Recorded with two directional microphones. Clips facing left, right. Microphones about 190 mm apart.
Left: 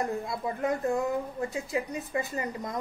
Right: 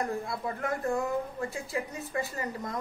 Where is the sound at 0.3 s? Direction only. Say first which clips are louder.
Left 3 dB; 20° left (ahead or behind).